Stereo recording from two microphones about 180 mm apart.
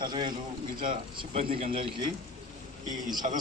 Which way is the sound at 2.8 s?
20° right (ahead or behind).